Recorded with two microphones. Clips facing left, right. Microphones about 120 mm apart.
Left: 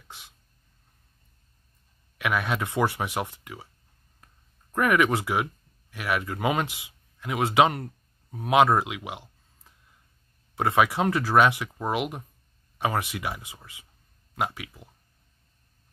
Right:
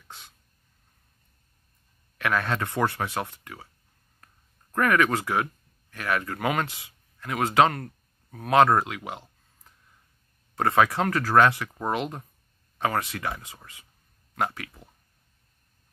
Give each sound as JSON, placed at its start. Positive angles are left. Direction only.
{"t": 2.1, "sound": "speech", "side_deg": 15}
{"t": 4.7, "sound": "speech", "side_deg": 15}
{"t": 10.5, "sound": "speech", "side_deg": 15}